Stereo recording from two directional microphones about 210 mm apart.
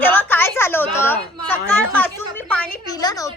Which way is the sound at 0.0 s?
10° left (ahead or behind).